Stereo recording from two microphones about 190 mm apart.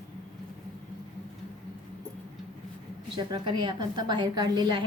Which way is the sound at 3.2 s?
25° right (ahead or behind).